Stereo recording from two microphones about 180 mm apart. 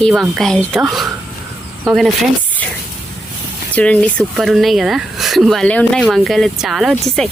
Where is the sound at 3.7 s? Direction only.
5° left (ahead or behind).